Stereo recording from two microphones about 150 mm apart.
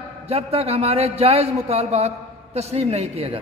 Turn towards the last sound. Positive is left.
turn(degrees=-45)  # may be behind; listen again after turning